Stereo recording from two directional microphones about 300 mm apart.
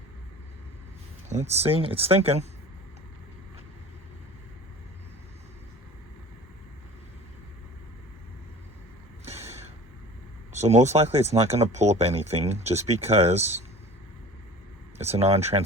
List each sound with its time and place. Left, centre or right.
1.3 s speech: right
9.2 s vehicle: right
10.5 s speech: right
14.9 s speech: right